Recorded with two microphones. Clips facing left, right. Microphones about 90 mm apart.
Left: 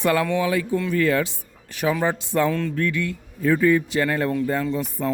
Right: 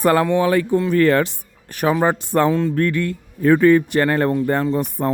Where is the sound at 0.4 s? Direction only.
55° right (ahead or behind).